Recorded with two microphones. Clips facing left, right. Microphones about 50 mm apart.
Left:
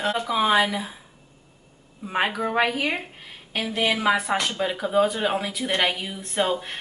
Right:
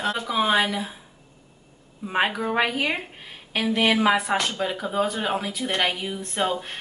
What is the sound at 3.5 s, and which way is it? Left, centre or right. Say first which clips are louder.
Speech: right 3 dB; right.